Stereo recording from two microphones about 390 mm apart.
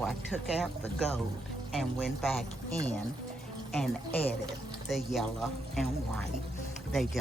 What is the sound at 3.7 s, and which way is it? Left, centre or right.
Speech, centre.